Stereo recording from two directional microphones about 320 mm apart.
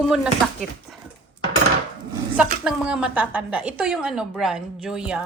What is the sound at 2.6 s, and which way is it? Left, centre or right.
A woman's voice, centre.